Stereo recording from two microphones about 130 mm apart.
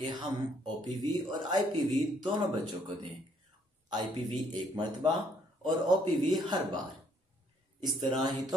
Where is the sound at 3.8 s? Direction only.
35° right (ahead or behind).